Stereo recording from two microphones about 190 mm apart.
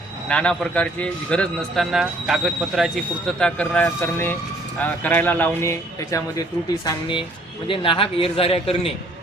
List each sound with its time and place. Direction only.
0.3 s a man's voice: 5° left (ahead or behind)
6.8 s a man's voice: 25° left (ahead or behind)